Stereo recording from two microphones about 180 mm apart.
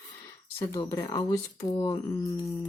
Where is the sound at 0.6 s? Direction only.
20° left (ahead or behind).